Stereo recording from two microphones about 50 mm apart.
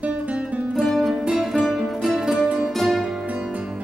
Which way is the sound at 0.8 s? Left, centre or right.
Centre.